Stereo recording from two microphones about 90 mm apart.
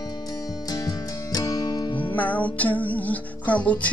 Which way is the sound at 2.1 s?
20° left (ahead or behind).